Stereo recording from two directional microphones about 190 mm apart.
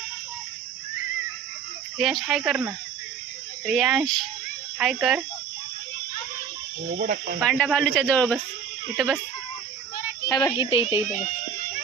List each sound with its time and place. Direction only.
2.0 s speech: centre (ahead or behind)
6.9 s speech: 45° right (ahead or behind)
7.3 s speech: 5° left (ahead or behind)
10.2 s speech: 20° left (ahead or behind)